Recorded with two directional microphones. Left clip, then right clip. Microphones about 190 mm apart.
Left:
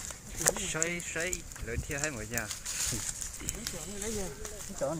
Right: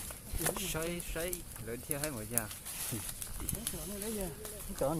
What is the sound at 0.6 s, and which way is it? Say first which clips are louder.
Speech: left 4 dB; 5° left (ahead or behind).